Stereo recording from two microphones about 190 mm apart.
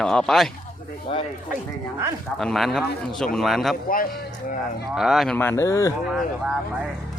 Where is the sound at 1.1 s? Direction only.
30° left (ahead or behind).